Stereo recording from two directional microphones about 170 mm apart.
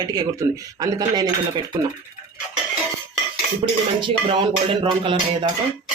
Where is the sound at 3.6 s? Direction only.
35° right (ahead or behind).